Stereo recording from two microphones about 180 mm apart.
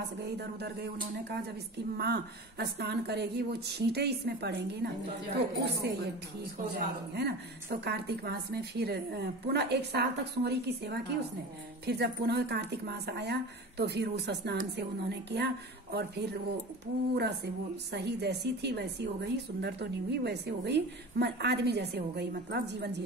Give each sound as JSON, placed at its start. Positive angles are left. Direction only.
{"t": 0.4, "sound": "a woman's voice", "side_deg": -65}
{"t": 5.8, "sound": "a woman's voice", "side_deg": -65}